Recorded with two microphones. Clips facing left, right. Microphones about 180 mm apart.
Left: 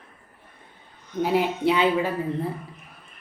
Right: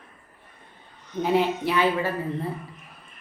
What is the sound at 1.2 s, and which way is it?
Speech, 5° left (ahead or behind).